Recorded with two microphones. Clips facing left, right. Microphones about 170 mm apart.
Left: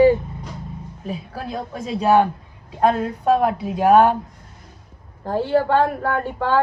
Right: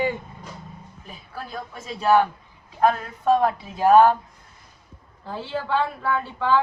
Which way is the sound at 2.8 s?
25° left (ahead or behind).